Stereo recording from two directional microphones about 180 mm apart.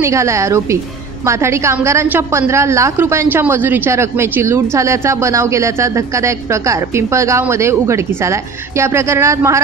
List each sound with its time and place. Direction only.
0.0 s a woman's voice: 15° right (ahead or behind)